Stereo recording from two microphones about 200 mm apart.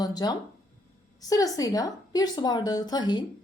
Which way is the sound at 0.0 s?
20° left (ahead or behind).